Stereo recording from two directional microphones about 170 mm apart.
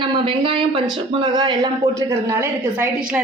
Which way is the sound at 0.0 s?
30° right (ahead or behind).